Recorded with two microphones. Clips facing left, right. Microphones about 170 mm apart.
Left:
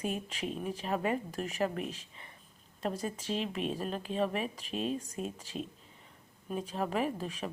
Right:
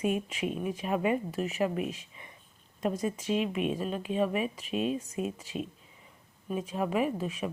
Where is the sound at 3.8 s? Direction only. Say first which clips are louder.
Right 3 dB; 40° left (ahead or behind).